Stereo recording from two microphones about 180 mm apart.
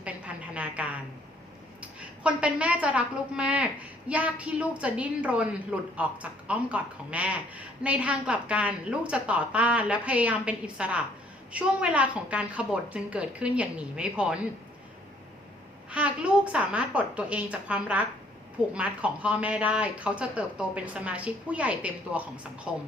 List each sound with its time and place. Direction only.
0.0 s a sound: 5° right (ahead or behind)
2.2 s a woman's voice: 5° right (ahead or behind)
15.9 s a woman's voice: 5° right (ahead or behind)